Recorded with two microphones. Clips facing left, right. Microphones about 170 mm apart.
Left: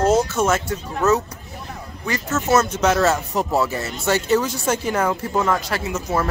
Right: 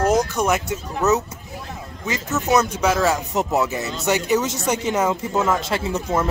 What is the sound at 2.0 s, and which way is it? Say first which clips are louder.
Speech: left 1 dB; 20° right (ahead or behind).